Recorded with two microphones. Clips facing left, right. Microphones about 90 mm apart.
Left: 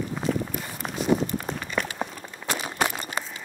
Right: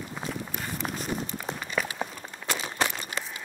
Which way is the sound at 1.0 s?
45° left (ahead or behind).